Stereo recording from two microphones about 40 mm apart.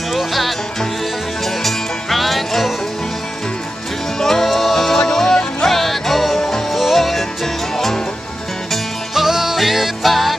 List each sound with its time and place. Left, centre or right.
0.1 s music: centre
4.2 s music: centre
6.7 s music: centre
9.1 s music: centre